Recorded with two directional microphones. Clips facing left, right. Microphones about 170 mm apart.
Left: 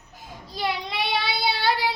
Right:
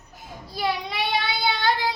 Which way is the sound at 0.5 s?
5° right (ahead or behind).